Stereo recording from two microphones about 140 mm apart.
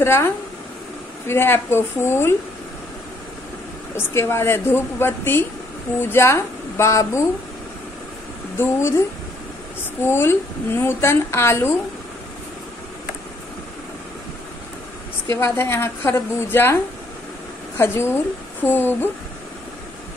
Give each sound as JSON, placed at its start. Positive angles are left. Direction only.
{"t": 0.0, "sound": "a woman's voice", "side_deg": 15}
{"t": 3.9, "sound": "a woman's voice", "side_deg": 15}
{"t": 8.5, "sound": "a woman's voice", "side_deg": 15}
{"t": 10.0, "sound": "a woman's voice", "side_deg": 20}
{"t": 15.2, "sound": "a woman's voice", "side_deg": 20}
{"t": 17.7, "sound": "a woman's voice", "side_deg": 15}